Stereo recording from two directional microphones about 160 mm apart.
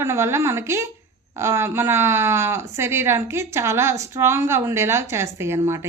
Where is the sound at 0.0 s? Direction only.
15° right (ahead or behind).